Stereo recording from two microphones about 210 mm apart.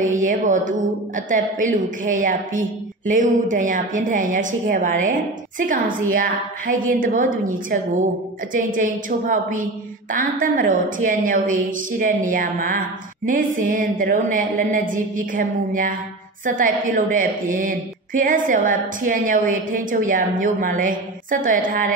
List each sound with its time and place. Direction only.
0.2 s a woman's voice: 40° right (ahead or behind)
8.5 s a woman's voice: 40° right (ahead or behind)